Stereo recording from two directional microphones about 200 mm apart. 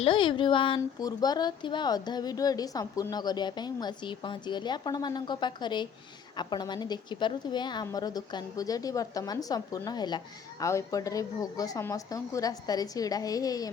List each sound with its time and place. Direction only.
0.0 s a woman's voice: 25° left (ahead or behind)